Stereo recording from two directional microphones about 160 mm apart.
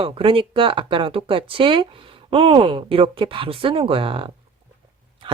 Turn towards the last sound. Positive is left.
turn(degrees=-35)  # may be behind; listen again after turning